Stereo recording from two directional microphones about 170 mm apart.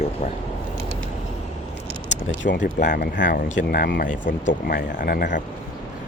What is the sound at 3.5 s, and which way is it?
Speech, 75° left (ahead or behind).